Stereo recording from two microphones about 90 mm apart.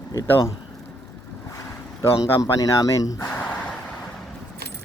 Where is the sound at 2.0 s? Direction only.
35° left (ahead or behind).